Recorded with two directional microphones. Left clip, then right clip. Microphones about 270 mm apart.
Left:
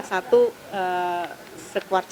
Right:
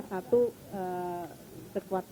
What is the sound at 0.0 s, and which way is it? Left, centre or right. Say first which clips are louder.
A woman's voice: left 9 dB; centre.